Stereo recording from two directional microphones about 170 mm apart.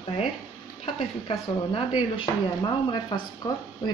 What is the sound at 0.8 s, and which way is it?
Speech, 35° left (ahead or behind).